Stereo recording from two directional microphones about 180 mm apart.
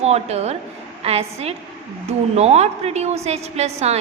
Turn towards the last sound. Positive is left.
turn(degrees=-35)  # may be behind; listen again after turning